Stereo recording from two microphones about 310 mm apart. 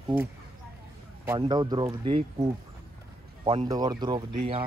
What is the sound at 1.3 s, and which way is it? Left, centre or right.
Speech, centre.